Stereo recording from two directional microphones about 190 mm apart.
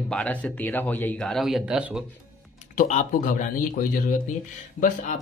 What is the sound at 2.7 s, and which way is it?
Speech, 40° left (ahead or behind).